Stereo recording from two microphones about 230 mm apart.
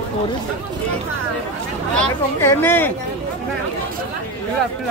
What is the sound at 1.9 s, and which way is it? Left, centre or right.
Speech, centre.